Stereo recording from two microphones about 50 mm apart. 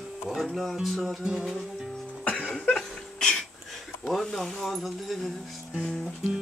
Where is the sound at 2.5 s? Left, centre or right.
Centre.